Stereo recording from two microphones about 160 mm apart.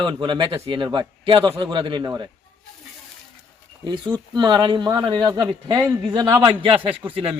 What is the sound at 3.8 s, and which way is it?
A man's voice, 30° right (ahead or behind).